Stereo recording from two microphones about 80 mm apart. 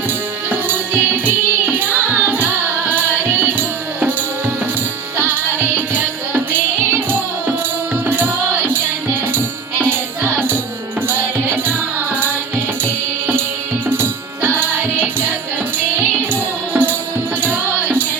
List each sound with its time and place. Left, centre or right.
0.5 s music: right
5.1 s music: right
12.8 s music: right
16.3 s music: right